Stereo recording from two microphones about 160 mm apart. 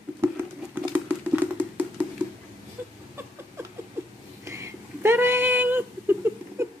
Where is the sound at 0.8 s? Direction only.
10° right (ahead or behind).